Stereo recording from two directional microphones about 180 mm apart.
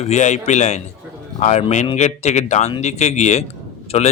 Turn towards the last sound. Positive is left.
turn(degrees=35)  # may be behind; listen again after turning